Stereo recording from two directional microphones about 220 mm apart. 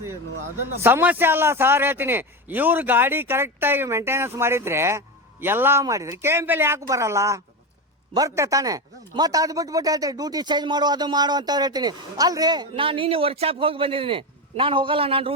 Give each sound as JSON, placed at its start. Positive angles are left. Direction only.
{"t": 0.8, "sound": "a man's voice", "side_deg": -10}